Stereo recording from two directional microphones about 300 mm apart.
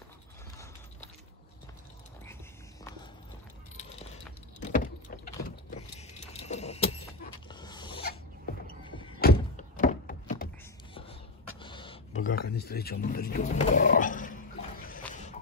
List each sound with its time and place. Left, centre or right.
2.8 s walk: centre
4.6 s vehicle: left
5.4 s goat: left
9.2 s thunk: left
11.6 s a sound: centre
12.4 s roaring cats: left